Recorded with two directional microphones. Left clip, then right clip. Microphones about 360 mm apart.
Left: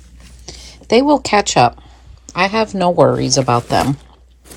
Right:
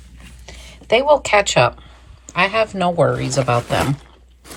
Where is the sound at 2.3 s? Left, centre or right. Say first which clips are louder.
Left 1 dB; centre.